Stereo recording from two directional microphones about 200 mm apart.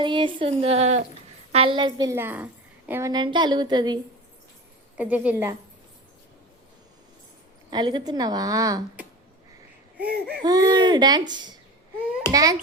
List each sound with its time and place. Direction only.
0.0 s a woman's voice: 25° right (ahead or behind)
4.9 s a woman's voice: 5° right (ahead or behind)
7.7 s a woman's voice: 20° right (ahead or behind)
10.4 s a woman's voice: 20° right (ahead or behind)